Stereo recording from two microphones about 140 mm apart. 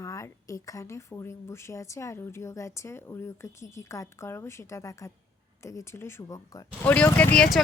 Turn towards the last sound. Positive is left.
turn(degrees=5)  # may be behind; listen again after turning